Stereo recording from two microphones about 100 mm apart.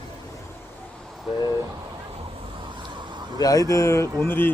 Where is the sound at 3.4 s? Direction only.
35° left (ahead or behind); by 4.5 s 20° left (ahead or behind).